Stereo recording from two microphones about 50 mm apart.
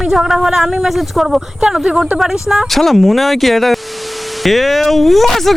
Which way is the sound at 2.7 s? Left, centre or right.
Centre.